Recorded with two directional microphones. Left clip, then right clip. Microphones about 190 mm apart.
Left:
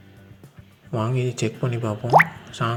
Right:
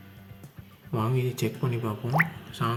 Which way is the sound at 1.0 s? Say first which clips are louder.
Left 4 dB; 20° left (ahead or behind).